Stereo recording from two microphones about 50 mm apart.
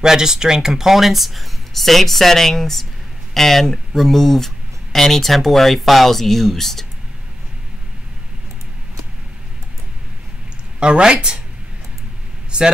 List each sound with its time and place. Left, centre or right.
0.0 s speech: centre
10.8 s speech: centre
12.4 s a sound: centre